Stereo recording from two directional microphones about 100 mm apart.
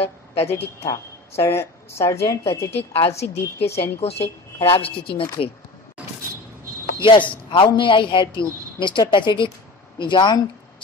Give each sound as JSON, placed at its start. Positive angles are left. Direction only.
{"t": 0.0, "sound": "a sound", "side_deg": 90}
{"t": 0.8, "sound": "a woman's voice", "side_deg": 25}
{"t": 4.8, "sound": "speech", "side_deg": 65}
{"t": 7.0, "sound": "a man's voice", "side_deg": 55}